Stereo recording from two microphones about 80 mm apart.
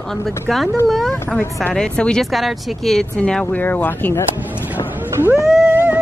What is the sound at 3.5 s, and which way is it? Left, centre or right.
Speech, left.